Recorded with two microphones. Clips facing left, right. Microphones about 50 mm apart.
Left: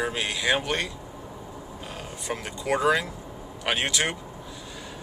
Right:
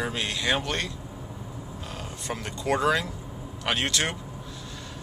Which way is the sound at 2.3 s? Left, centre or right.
Centre.